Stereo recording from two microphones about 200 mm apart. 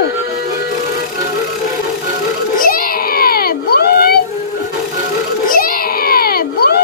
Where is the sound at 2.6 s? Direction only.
45° left (ahead or behind).